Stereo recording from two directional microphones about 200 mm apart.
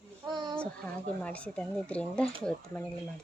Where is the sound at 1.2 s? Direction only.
5° left (ahead or behind).